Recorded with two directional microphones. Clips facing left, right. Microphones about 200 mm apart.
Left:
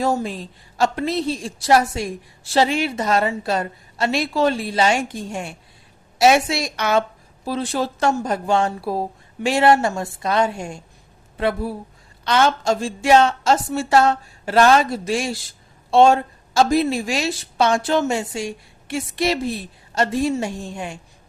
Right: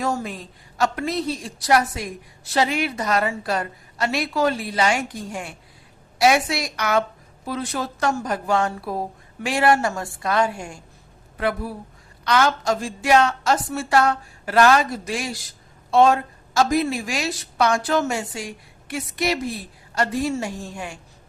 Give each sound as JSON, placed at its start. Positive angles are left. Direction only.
{"t": 0.0, "sound": "a woman's voice", "side_deg": 30}